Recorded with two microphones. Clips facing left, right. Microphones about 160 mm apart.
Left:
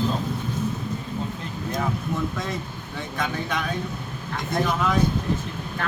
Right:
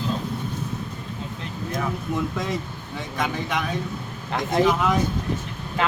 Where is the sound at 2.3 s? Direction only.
15° right (ahead or behind).